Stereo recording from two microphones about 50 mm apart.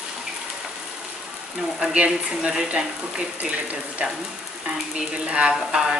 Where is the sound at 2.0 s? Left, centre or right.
Centre.